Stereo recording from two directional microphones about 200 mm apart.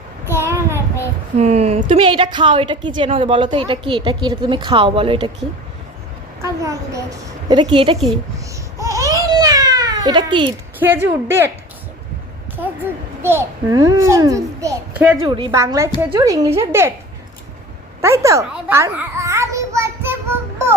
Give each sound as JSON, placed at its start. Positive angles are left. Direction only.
{"t": 0.3, "sound": "child singing", "side_deg": -10}
{"t": 1.4, "sound": "a woman's voice", "side_deg": -30}
{"t": 6.4, "sound": "a woman's voice", "side_deg": -15}
{"t": 8.8, "sound": "baby cry", "side_deg": -15}
{"t": 10.8, "sound": "a child's voice", "side_deg": -10}
{"t": 13.2, "sound": "a child's voice", "side_deg": -15}
{"t": 18.0, "sound": "a sound", "side_deg": -15}